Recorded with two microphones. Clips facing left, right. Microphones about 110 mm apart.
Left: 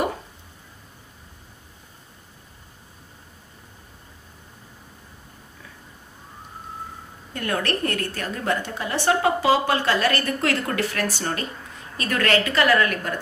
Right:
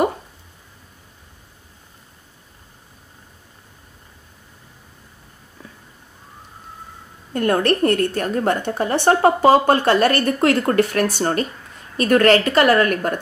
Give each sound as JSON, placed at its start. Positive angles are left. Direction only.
{"t": 7.3, "sound": "a woman's voice", "side_deg": -35}
{"t": 10.2, "sound": "a woman's voice", "side_deg": -35}
{"t": 10.8, "sound": "a woman's voice", "side_deg": -50}